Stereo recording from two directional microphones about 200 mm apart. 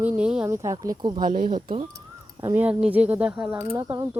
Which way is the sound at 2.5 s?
10° right (ahead or behind).